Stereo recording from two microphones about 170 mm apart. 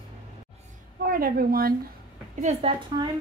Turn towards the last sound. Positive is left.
turn(degrees=-30)  # may be behind; listen again after turning